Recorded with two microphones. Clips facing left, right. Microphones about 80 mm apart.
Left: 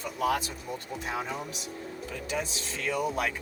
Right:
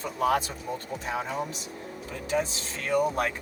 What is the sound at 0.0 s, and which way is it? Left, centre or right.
Speech, right.